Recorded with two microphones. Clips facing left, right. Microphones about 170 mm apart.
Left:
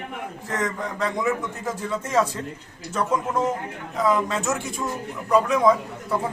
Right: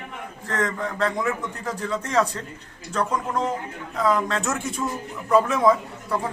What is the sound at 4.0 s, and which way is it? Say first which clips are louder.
A man's voice: even; 5° left (ahead or behind).